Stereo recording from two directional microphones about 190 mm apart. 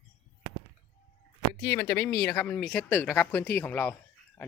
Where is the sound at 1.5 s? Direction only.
20° left (ahead or behind).